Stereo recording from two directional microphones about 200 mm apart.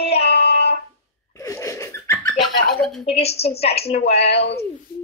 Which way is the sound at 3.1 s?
30° left (ahead or behind).